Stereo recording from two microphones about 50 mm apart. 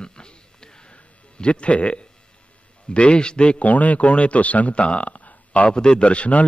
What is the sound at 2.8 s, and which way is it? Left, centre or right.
Speech, left.